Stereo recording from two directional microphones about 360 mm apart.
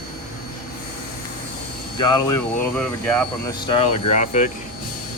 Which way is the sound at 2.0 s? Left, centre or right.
Centre.